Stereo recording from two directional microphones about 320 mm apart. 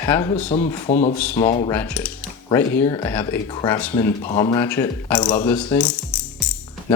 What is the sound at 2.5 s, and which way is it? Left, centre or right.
Speech, centre.